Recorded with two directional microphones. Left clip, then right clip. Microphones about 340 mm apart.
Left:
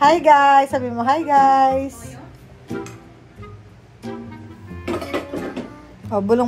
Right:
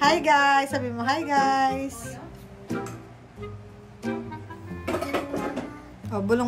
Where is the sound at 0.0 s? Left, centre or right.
Centre.